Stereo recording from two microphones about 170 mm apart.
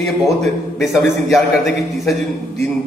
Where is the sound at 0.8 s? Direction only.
Centre (ahead or behind).